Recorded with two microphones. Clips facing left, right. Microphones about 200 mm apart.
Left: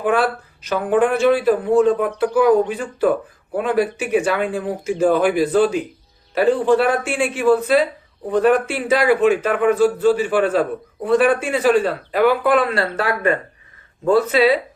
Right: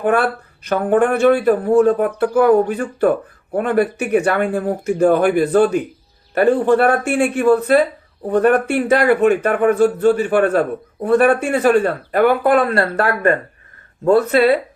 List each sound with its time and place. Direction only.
0.0 s a man's voice: 55° right (ahead or behind)